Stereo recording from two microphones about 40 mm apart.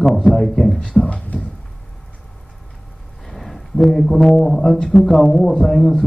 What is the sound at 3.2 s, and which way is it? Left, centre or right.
Speech, centre.